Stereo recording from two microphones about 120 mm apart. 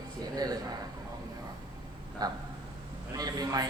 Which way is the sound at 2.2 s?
35° right (ahead or behind).